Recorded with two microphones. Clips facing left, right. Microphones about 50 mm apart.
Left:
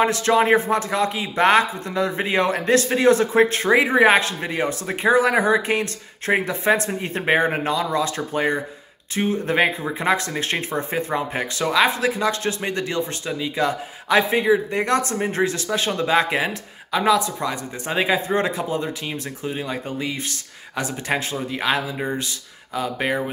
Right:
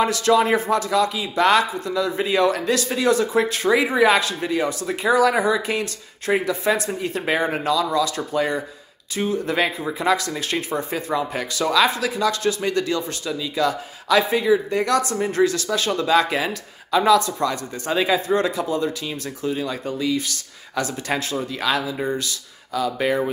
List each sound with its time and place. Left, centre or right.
0.0 s speech: left